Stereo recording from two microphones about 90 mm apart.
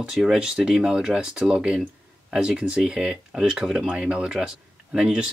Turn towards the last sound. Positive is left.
turn(degrees=-10)  # may be behind; listen again after turning